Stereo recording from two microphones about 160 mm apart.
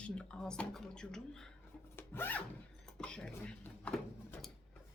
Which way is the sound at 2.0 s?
15° left (ahead or behind).